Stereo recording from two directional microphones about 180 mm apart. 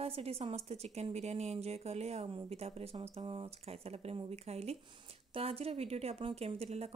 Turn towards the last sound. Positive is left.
turn(degrees=-35)  # may be behind; listen again after turning